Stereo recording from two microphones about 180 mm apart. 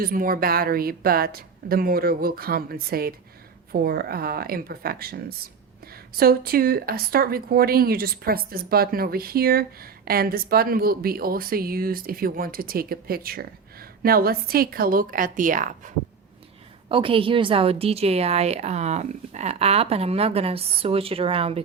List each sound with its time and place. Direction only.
0.0 s speech: 55° right (ahead or behind)
16.9 s a woman's voice: 30° right (ahead or behind)